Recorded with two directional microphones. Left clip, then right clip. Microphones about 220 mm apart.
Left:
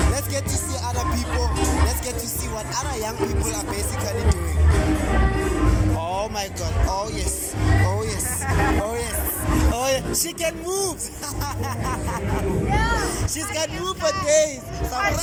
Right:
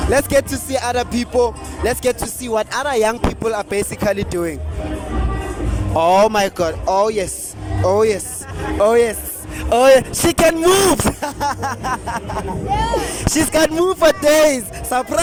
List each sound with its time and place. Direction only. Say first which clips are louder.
0.1 s speech: right 12 dB; 50° right (ahead or behind)
6.0 s speech: right 13 dB; 50° right (ahead or behind)
12.7 s speech: right 6 dB; 30° right (ahead or behind)
13.0 s speech: right 7 dB; 50° right (ahead or behind)